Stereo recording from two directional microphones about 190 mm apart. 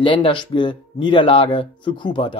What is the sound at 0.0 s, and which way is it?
Speech, 25° left (ahead or behind).